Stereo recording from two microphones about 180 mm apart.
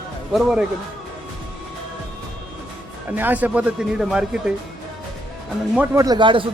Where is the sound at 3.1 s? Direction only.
10° right (ahead or behind).